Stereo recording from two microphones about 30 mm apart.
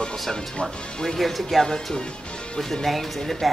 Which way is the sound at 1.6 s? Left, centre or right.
Left.